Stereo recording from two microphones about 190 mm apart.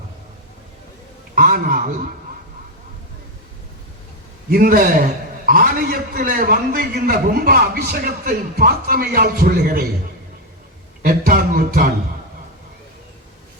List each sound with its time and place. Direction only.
1.4 s a man's voice: 50° right (ahead or behind)
4.5 s a man's voice: 50° right (ahead or behind)
11.0 s a man's voice: 50° right (ahead or behind)